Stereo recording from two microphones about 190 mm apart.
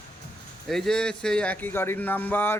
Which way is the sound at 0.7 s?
Centre (ahead or behind).